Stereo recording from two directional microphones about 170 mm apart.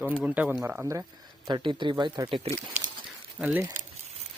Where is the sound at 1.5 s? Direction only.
25° right (ahead or behind).